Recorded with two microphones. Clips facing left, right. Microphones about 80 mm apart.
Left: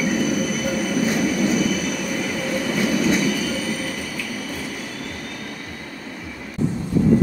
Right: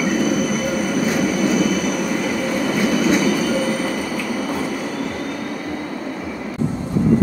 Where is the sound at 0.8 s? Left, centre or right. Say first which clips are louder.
Right 1 dB; right.